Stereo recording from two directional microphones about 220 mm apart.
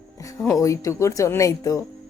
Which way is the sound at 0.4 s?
15° left (ahead or behind).